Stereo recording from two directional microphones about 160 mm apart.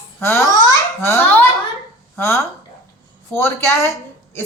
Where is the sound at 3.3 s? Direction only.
15° left (ahead or behind).